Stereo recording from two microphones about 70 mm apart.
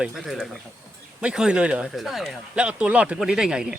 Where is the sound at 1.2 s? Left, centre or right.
Centre.